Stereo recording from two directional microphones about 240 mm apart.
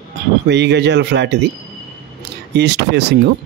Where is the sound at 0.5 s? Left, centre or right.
Right.